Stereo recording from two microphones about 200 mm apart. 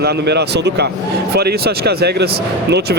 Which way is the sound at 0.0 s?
55° right (ahead or behind).